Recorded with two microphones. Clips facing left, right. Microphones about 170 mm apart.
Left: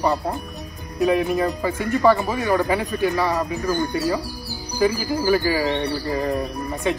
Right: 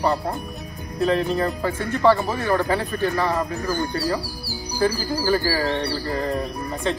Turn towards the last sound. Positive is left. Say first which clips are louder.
# left 1 dB
turn(degrees=15)  # may be behind; listen again after turning